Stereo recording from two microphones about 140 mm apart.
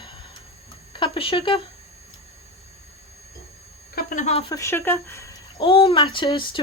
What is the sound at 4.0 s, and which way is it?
Speech, 70° left (ahead or behind).